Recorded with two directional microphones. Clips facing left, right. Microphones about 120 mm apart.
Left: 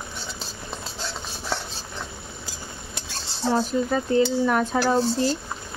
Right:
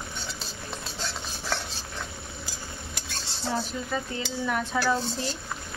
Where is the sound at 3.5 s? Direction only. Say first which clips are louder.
Left 8 dB; 45° left (ahead or behind).